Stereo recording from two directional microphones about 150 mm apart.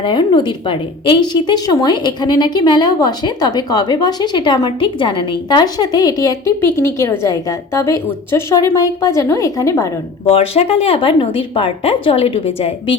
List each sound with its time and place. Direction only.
0.0 s a woman's voice: 35° left (ahead or behind)
10.2 s speech: 40° left (ahead or behind)